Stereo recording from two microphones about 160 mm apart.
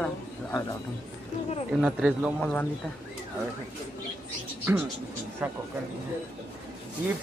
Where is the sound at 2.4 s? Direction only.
5° left (ahead or behind).